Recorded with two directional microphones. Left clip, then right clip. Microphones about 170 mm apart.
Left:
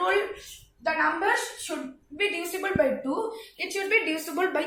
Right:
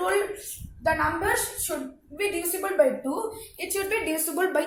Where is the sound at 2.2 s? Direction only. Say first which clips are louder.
Even; centre (ahead or behind).